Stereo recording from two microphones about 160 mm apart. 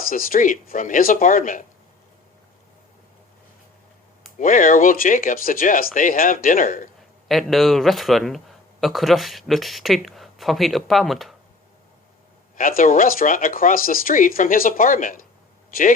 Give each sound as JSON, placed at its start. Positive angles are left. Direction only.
{"t": 0.1, "sound": "speech", "side_deg": 60}
{"t": 4.4, "sound": "speech", "side_deg": 55}
{"t": 7.3, "sound": "speech", "side_deg": 0}
{"t": 12.5, "sound": "speech", "side_deg": 60}